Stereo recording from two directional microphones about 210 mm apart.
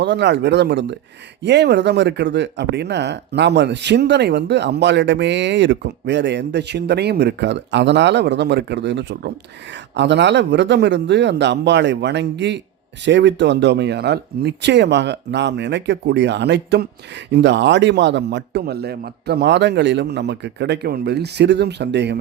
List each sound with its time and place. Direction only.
0.0 s speech: 55° right (ahead or behind)